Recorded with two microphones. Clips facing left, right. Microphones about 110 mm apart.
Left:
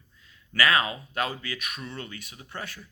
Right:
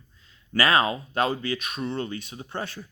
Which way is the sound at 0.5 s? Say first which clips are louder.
Right 3 dB; 30° right (ahead or behind).